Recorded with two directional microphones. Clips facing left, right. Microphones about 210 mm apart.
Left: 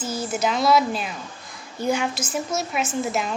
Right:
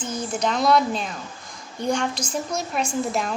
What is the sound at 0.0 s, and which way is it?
A woman's voice, 5° left (ahead or behind).